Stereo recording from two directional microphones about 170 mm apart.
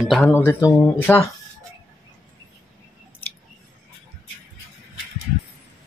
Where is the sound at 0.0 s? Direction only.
Centre (ahead or behind).